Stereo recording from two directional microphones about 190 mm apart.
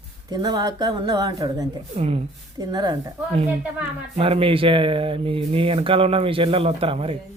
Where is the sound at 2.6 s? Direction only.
20° right (ahead or behind).